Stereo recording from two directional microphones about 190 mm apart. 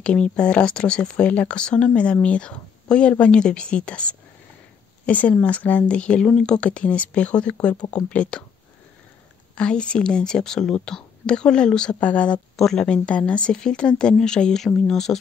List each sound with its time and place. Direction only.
0.0 s speech: 5° left (ahead or behind)
9.6 s speech: 5° left (ahead or behind)